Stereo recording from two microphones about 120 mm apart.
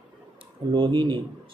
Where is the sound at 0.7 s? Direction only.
40° right (ahead or behind).